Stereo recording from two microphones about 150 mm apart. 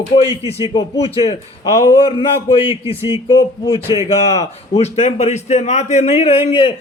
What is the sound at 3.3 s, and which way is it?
A man's voice, 30° left (ahead or behind).